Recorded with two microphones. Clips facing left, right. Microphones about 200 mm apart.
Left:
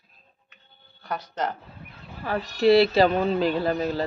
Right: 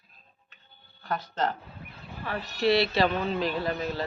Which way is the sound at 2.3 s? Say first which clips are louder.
Left 6 dB; 30° left (ahead or behind).